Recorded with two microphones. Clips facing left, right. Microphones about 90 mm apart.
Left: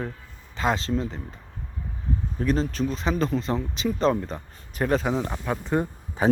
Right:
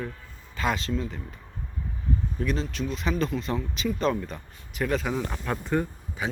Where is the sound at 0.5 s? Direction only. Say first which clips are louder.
Left 3 dB; 25° left (ahead or behind).